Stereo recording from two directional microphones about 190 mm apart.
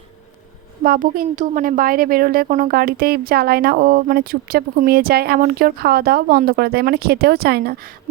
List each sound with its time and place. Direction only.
0.9 s a woman's voice: 45° right (ahead or behind)